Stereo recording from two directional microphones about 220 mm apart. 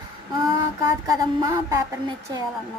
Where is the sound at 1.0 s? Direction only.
15° right (ahead or behind).